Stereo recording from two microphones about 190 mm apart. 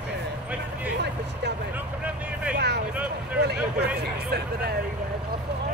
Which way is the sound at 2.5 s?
60° right (ahead or behind).